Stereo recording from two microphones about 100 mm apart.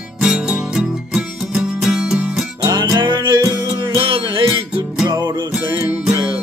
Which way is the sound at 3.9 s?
65° right (ahead or behind).